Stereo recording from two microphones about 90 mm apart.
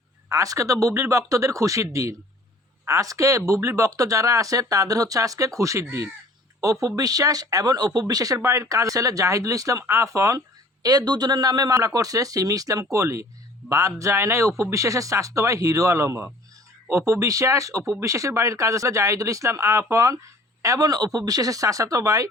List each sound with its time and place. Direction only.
0.3 s speech: 35° right (ahead or behind)
8.4 s speech: 30° right (ahead or behind)
10.8 s speech: 45° right (ahead or behind)